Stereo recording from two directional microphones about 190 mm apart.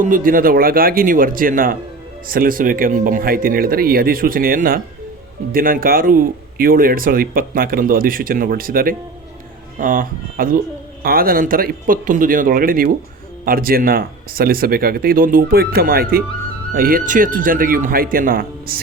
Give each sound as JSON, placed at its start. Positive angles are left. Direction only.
{"t": 0.0, "sound": "speech", "side_deg": -45}